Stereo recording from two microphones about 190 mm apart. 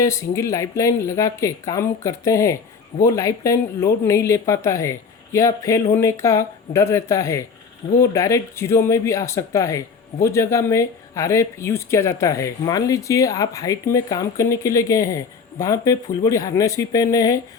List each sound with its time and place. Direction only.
0.0 s speech: 15° left (ahead or behind)